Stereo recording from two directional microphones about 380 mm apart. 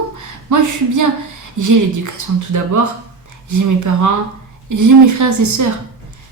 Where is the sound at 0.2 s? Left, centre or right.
Right.